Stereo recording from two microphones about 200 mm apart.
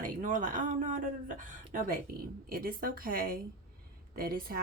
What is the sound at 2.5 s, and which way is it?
Speech, 50° right (ahead or behind).